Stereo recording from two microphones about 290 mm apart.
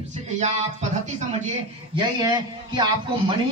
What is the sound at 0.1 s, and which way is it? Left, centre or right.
A man's voice, right.